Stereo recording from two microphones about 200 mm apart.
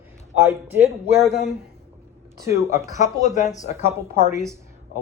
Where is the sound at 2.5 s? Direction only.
15° right (ahead or behind).